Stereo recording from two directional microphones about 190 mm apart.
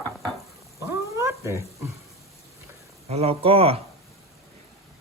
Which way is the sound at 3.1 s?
30° right (ahead or behind).